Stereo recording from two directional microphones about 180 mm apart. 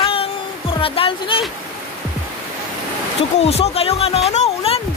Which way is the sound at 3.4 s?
35° left (ahead or behind).